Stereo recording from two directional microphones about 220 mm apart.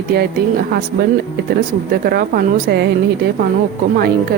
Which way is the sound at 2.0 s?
45° right (ahead or behind).